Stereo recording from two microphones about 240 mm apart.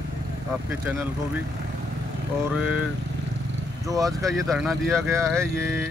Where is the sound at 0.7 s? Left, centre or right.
Centre.